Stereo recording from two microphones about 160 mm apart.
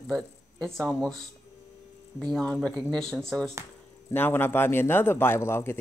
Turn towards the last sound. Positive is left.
turn(degrees=15)  # may be behind; listen again after turning